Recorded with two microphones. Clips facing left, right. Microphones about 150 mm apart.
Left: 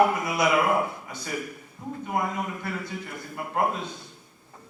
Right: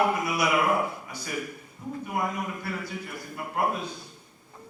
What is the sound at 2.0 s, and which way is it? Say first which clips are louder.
Speech: left 2 dB; 25° left (ahead or behind).